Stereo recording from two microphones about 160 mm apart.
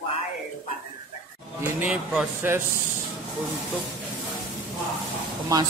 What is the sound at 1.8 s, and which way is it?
Speech, 10° right (ahead or behind).